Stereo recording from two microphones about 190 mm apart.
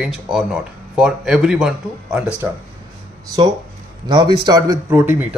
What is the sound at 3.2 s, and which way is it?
A man's voice, 20° right (ahead or behind).